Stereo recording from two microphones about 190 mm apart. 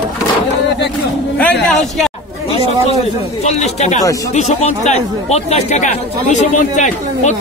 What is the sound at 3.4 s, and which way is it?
Speech, 35° left (ahead or behind).